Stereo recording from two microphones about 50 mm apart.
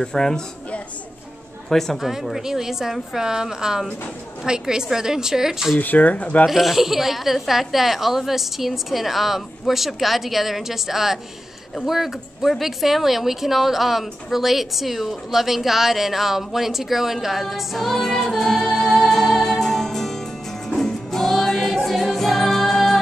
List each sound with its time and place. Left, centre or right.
0.0 s a woman's voice: centre
1.7 s a woman's voice: centre
2.0 s a woman's voice: centre
5.8 s speech: left
6.4 s speech: centre
18.9 s music: centre